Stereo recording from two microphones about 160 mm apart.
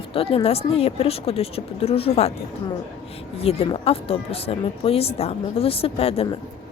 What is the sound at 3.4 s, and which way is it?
A woman's voice, 40° left (ahead or behind).